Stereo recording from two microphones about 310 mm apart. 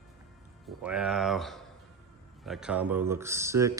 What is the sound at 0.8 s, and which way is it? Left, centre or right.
Speech, centre.